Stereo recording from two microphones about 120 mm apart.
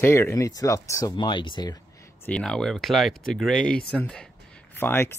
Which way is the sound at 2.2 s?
5° left (ahead or behind).